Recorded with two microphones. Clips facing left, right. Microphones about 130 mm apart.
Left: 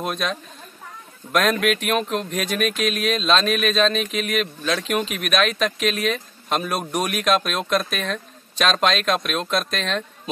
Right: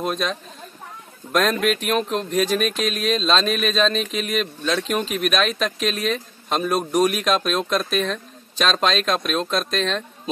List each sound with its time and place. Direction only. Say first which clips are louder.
0.0 s speech: right 1 dB; centre (ahead or behind)